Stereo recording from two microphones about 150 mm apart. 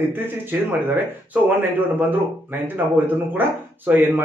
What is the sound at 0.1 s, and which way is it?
Speech, 15° right (ahead or behind).